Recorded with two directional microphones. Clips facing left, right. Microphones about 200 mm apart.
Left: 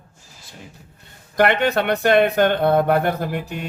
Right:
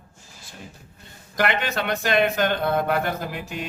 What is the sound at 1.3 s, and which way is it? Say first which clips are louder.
Speech: left 7 dB; 55° left (ahead or behind).